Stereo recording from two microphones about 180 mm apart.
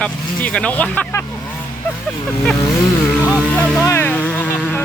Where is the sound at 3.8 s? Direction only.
15° left (ahead or behind).